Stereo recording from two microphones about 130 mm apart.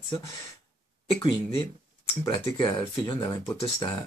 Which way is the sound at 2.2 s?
30° left (ahead or behind).